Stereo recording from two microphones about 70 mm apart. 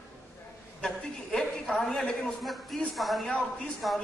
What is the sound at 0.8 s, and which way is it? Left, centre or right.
A woman's voice, centre.